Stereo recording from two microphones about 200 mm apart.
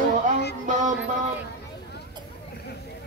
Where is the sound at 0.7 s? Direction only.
40° right (ahead or behind).